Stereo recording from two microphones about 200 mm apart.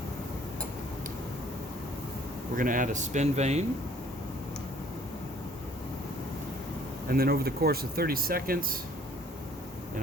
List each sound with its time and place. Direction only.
2.6 s speech: 40° right (ahead or behind)
7.1 s speech: 50° right (ahead or behind)